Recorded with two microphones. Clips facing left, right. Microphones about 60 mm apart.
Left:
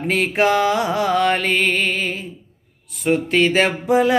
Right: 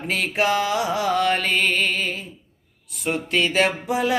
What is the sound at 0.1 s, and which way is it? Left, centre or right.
Mantra, left.